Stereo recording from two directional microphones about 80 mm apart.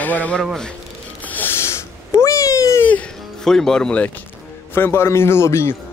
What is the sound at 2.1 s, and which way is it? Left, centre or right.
Cat, left.